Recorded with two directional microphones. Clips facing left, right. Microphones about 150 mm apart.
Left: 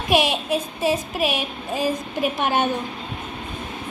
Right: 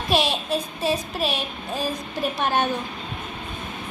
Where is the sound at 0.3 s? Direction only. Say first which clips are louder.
Left 2 dB; 15° left (ahead or behind).